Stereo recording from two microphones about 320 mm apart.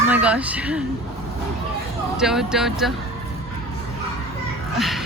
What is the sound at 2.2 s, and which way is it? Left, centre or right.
Speech, centre.